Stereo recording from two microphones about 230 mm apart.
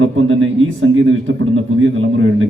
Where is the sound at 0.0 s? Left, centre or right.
Right.